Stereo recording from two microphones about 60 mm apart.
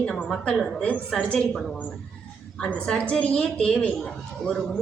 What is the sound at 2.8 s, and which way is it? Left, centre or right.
Speech, centre.